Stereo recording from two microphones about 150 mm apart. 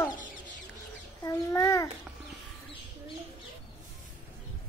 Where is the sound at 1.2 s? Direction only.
20° left (ahead or behind).